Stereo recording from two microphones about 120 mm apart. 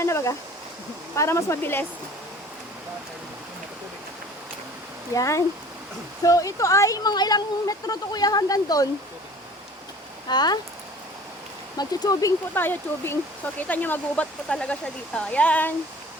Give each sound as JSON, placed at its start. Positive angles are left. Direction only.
{"t": 0.0, "sound": "a sound", "side_deg": 25}
{"t": 1.1, "sound": "speech", "side_deg": 25}
{"t": 5.1, "sound": "speech", "side_deg": 25}
{"t": 10.2, "sound": "speech", "side_deg": 35}
{"t": 11.8, "sound": "speech", "side_deg": 30}
{"t": 12.5, "sound": "speech", "side_deg": 15}